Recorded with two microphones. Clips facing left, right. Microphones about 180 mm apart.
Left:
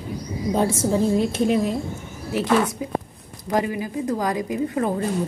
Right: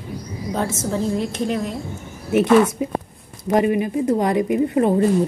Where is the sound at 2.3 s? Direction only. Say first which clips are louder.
Right 6 dB; 20° right (ahead or behind).